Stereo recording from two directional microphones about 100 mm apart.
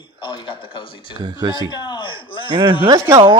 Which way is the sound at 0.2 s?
50° left (ahead or behind).